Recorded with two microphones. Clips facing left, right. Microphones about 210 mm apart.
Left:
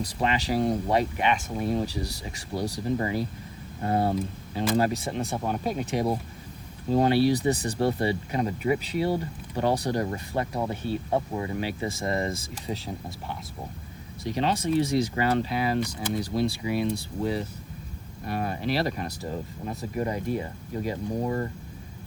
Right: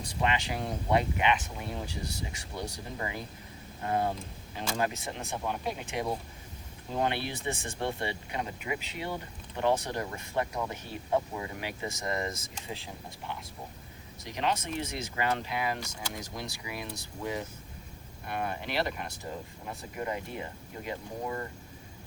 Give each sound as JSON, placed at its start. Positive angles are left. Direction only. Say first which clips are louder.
{"t": 0.0, "sound": "speech", "louder": "left 4 dB", "side_deg": 35}